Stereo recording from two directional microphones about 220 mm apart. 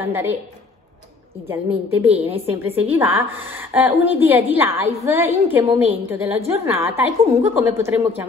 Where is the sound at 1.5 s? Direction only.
10° right (ahead or behind).